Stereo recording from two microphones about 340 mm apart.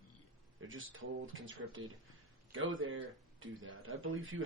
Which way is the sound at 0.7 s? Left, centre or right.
Right.